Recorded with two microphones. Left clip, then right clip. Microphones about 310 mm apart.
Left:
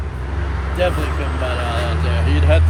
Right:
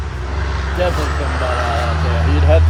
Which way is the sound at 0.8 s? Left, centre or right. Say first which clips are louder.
Even; centre.